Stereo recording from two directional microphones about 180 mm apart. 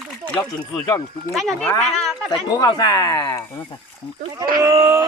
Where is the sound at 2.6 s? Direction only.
20° left (ahead or behind).